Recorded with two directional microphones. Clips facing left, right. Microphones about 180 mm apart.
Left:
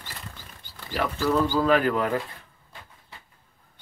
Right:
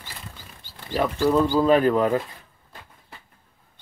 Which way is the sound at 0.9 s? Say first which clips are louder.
Right 4 dB; 25° right (ahead or behind).